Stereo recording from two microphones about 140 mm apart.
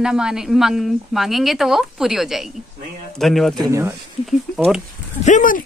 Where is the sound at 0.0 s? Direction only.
5° right (ahead or behind).